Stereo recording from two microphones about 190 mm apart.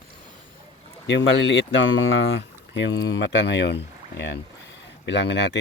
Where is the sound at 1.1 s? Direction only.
65° left (ahead or behind).